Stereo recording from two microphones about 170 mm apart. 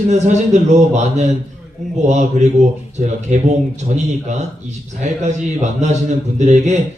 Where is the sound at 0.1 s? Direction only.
45° right (ahead or behind).